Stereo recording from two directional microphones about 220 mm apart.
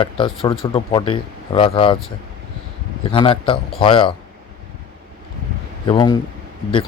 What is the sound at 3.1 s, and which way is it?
Speech, 20° left (ahead or behind).